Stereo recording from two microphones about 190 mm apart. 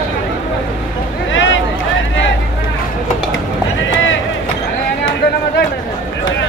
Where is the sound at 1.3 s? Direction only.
90° left.